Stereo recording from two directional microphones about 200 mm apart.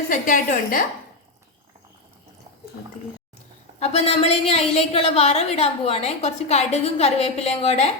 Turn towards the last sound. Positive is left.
turn(degrees=30)  # may be behind; listen again after turning